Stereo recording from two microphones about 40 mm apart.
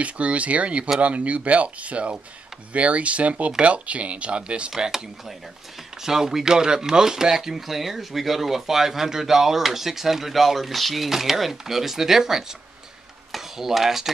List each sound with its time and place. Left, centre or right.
0.0 s speech: right
4.7 s speech: centre
6.0 s speech: centre